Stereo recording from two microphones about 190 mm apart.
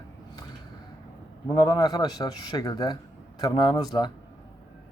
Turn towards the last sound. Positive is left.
turn(degrees=20)  # may be behind; listen again after turning